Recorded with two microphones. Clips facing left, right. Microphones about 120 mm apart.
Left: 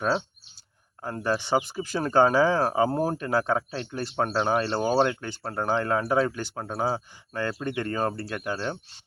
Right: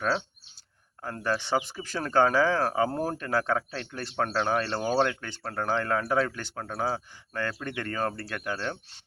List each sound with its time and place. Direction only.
1.0 s speech: 15° left (ahead or behind)